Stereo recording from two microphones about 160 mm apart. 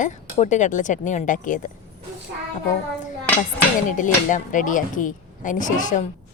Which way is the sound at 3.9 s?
55° left (ahead or behind).